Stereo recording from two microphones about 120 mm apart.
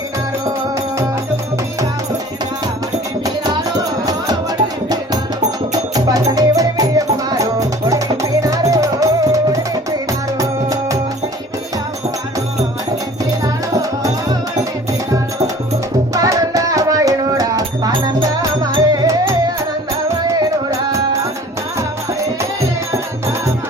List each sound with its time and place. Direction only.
5.9 s music: 30° right (ahead or behind)
13.4 s music: 30° right (ahead or behind)
16.1 s music: 30° right (ahead or behind)
20.3 s music: 25° right (ahead or behind)